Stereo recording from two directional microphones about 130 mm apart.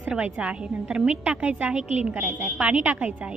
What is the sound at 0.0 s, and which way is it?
A woman's voice, 5° right (ahead or behind).